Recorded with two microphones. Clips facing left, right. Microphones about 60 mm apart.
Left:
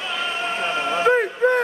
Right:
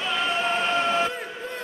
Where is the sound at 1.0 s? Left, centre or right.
Left.